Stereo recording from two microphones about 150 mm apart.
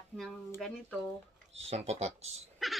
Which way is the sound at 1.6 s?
45° right (ahead or behind).